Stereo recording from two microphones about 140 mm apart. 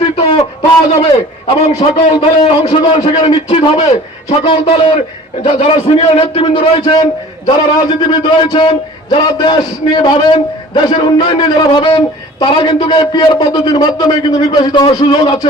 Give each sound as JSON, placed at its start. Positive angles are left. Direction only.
{"t": 0.2, "sound": "a sound", "side_deg": 40}
{"t": 1.5, "sound": "a man's voice", "side_deg": 50}
{"t": 2.2, "sound": "a man's voice", "side_deg": 40}